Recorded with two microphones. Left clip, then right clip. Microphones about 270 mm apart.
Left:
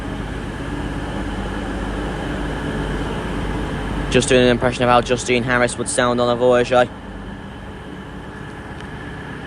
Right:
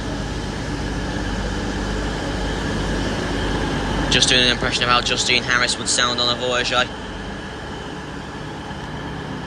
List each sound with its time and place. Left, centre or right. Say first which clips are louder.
4.3 s speech: left 2 dB; centre